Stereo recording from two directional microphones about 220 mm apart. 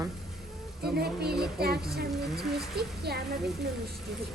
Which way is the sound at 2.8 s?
45° right (ahead or behind).